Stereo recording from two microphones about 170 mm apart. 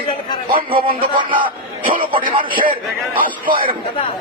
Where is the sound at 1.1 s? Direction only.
30° right (ahead or behind).